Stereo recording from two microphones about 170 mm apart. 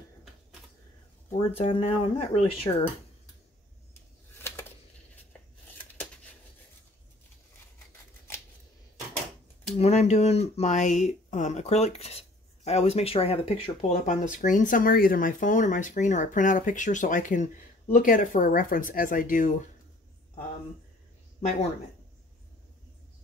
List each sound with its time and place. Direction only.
1.3 s speech: 35° left (ahead or behind)
4.4 s a sound: 15° left (ahead or behind)
9.8 s speech: 40° left (ahead or behind)